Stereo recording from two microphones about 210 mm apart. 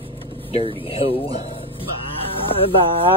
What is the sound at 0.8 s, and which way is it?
Speech, 25° left (ahead or behind).